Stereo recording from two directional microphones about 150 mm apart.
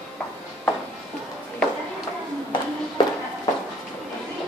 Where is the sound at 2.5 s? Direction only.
30° left (ahead or behind).